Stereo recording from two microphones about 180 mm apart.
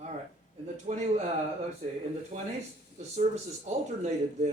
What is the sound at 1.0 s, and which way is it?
Speech, 40° right (ahead or behind).